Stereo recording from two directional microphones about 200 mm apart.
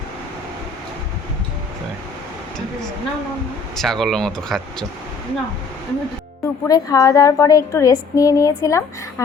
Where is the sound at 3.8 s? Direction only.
Centre (ahead or behind).